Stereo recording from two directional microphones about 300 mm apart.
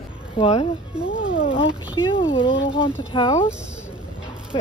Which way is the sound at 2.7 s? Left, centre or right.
Centre.